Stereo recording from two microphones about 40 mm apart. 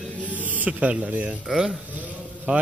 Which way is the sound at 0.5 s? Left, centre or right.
Right.